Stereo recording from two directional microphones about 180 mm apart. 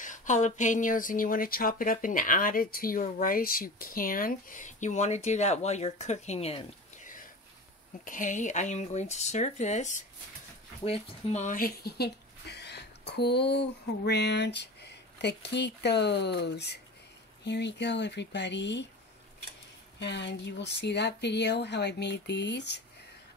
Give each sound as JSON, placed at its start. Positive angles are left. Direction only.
{"t": 0.0, "sound": "speech", "side_deg": 45}
{"t": 8.0, "sound": "speech", "side_deg": 45}
{"t": 20.0, "sound": "speech", "side_deg": 75}